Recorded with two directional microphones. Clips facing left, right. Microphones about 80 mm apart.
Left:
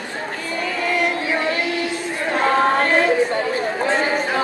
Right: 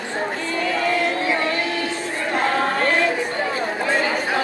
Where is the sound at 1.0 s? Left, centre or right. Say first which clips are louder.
Even; left.